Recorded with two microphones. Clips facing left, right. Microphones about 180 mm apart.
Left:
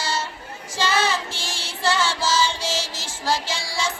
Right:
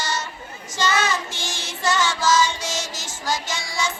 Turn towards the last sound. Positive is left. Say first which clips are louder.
# even
turn(degrees=30)  # may be behind; listen again after turning